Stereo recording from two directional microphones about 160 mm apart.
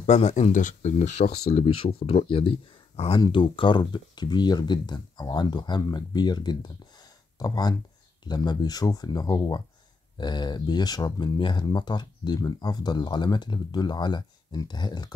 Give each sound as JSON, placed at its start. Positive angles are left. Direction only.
{"t": 0.0, "sound": "speech", "side_deg": 45}